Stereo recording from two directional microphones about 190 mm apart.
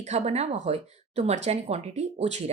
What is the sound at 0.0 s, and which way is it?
Speech, 35° right (ahead or behind).